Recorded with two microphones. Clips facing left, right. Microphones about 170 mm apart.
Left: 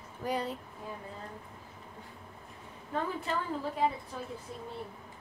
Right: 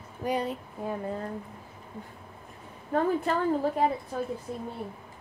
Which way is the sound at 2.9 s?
50° right (ahead or behind).